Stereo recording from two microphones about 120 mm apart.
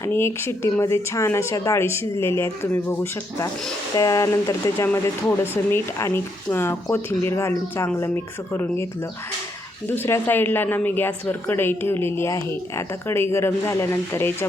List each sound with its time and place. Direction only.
0.0 s speech: 20° left (ahead or behind)
9.9 s speech: 15° left (ahead or behind)